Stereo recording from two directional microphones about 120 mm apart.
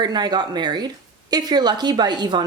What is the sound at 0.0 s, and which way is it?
Speech, 35° right (ahead or behind).